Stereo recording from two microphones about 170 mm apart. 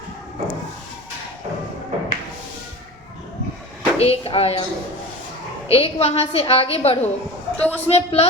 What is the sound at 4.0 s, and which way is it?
Speech, 35° left (ahead or behind).